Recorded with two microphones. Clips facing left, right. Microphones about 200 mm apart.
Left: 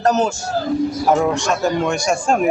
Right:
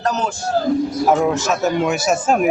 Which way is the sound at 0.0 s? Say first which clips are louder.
Left 5 dB; 45° left (ahead or behind).